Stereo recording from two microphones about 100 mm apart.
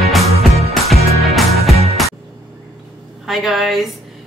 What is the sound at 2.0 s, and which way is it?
Music, centre (ahead or behind).